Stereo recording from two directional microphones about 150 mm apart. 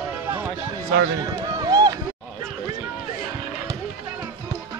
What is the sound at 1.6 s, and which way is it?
Run, 25° right (ahead or behind).